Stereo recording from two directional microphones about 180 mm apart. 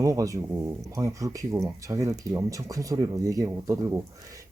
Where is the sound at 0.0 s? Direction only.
20° right (ahead or behind).